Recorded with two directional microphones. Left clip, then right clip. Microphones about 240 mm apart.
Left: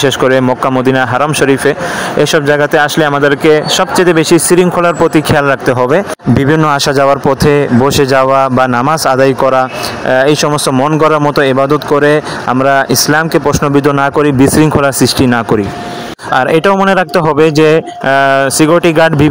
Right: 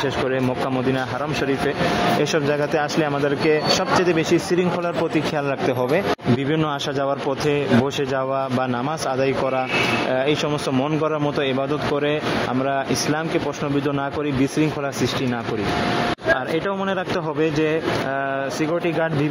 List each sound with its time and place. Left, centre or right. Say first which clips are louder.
0.9 s speech: left 14 dB; left